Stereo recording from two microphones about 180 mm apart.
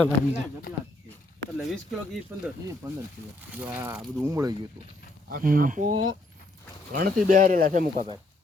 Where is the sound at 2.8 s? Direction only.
20° right (ahead or behind).